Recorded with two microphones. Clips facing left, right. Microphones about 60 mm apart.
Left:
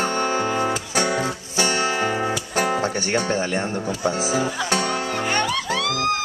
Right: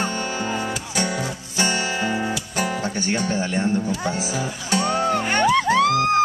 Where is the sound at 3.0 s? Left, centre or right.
Left.